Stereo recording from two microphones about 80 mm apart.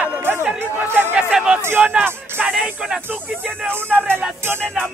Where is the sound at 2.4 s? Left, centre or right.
Centre.